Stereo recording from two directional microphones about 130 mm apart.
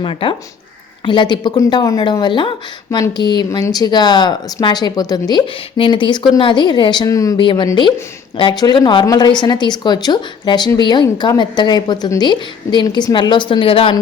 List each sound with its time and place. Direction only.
0.0 s speech: 40° left (ahead or behind); by 7.3 s 25° left (ahead or behind)
7.3 s speech: 40° left (ahead or behind)